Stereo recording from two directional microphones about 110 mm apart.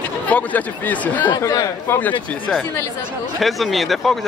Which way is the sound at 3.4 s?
Centre (ahead or behind).